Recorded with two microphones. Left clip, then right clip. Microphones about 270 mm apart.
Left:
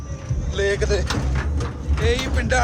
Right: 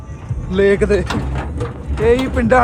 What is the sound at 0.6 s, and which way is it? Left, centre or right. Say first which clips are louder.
Speech: right 8 dB; centre.